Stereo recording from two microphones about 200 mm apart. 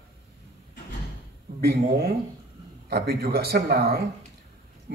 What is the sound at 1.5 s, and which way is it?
A man's voice, 50° right (ahead or behind).